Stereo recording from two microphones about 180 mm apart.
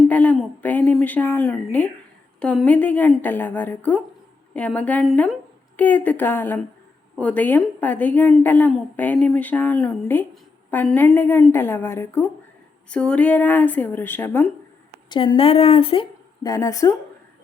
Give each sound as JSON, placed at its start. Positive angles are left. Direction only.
{"t": 0.1, "sound": "a sound", "side_deg": 10}
{"t": 2.4, "sound": "a woman's voice", "side_deg": 5}
{"t": 15.1, "sound": "speech", "side_deg": 25}
{"t": 16.4, "sound": "a woman's voice", "side_deg": 20}